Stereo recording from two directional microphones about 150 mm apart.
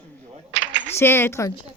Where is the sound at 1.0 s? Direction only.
15° left (ahead or behind).